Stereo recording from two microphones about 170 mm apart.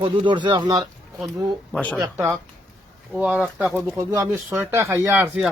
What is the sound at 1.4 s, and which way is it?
Speech, 5° left (ahead or behind).